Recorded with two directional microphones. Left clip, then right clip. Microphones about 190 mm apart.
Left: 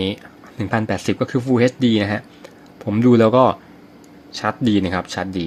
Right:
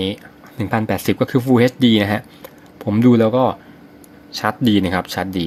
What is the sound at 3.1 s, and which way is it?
Speech, 10° left (ahead or behind).